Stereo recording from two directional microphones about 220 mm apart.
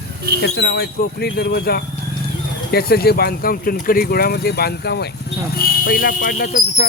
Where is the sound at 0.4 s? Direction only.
50° left (ahead or behind).